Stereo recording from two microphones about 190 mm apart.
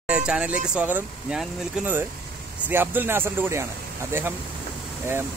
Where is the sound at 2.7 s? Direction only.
10° right (ahead or behind).